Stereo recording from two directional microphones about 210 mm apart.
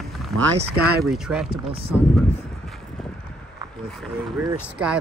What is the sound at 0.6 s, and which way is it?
Speech, 50° right (ahead or behind).